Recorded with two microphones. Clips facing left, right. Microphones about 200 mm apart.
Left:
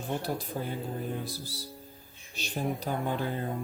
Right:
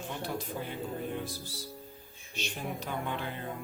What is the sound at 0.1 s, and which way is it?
Speech, 40° left (ahead or behind).